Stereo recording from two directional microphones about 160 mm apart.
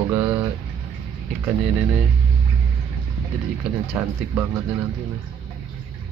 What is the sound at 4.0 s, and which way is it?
Speech, 10° right (ahead or behind).